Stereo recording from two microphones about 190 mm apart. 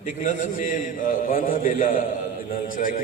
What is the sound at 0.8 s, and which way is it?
A man's voice, 45° left (ahead or behind).